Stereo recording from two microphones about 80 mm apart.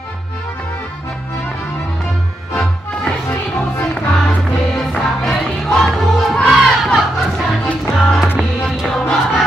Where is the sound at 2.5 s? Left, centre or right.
Centre.